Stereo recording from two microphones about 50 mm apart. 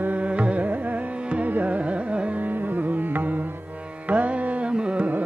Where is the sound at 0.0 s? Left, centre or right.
Right.